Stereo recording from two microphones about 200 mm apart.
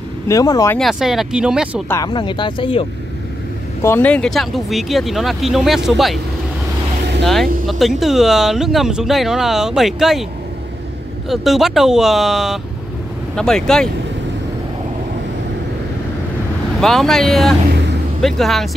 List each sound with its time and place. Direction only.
0.3 s speech: 15° left (ahead or behind)
0.7 s speech: centre (ahead or behind)
1.9 s speech: 20° left (ahead or behind)
3.8 s speech: 10° left (ahead or behind)
7.2 s speech: centre (ahead or behind)
11.2 s speech: centre (ahead or behind)
16.8 s speech: centre (ahead or behind)